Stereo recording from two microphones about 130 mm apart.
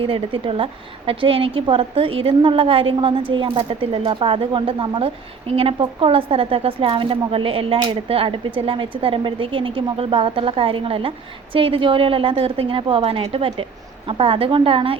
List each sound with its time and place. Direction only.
0.1 s a woman's voice: 45° right (ahead or behind)